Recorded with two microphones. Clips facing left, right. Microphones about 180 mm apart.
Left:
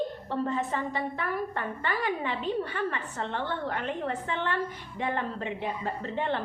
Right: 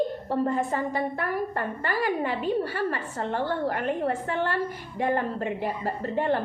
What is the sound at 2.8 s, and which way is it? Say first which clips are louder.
A woman's voice: right 3 dB; 40° right (ahead or behind).